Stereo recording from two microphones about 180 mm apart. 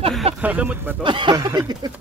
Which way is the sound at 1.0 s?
25° right (ahead or behind).